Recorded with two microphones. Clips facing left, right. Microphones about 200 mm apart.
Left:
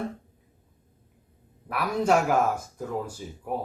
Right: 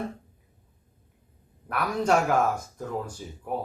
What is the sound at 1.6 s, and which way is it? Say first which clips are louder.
Speech: left 1 dB; 5° left (ahead or behind).